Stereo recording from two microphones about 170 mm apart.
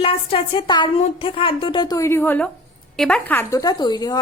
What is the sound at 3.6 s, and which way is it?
Speech, 25° left (ahead or behind).